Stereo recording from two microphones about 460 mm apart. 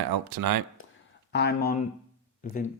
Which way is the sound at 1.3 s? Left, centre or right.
Left.